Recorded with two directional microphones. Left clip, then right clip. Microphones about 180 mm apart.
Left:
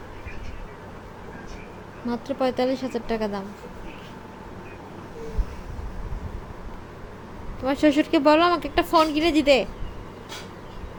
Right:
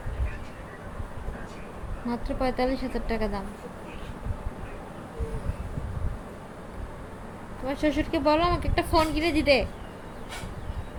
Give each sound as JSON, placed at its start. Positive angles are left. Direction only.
{"t": 2.0, "sound": "speech", "side_deg": 30}
{"t": 7.6, "sound": "speech", "side_deg": 40}